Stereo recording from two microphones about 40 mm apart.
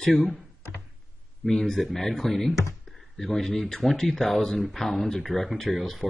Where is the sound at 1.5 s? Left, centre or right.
Centre.